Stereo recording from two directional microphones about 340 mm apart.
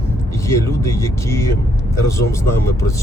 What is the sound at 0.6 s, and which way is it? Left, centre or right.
Speech, centre.